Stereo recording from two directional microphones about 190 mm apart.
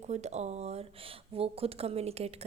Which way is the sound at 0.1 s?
35° right (ahead or behind).